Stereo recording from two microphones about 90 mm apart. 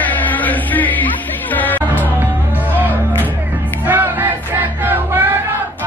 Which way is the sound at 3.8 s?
20° right (ahead or behind).